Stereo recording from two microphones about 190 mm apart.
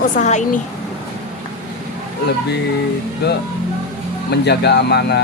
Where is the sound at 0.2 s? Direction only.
40° left (ahead or behind).